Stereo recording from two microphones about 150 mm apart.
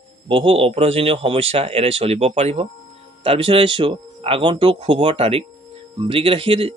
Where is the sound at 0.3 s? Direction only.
40° right (ahead or behind).